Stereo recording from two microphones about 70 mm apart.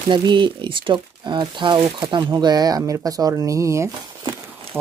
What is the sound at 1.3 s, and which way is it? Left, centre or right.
Speech, right.